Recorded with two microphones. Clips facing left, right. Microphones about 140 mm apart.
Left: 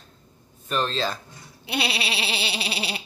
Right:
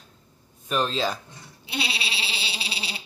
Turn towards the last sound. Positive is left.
turn(degrees=60)  # may be behind; listen again after turning